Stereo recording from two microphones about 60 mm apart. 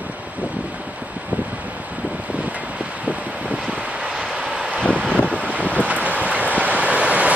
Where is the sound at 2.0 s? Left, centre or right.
Right.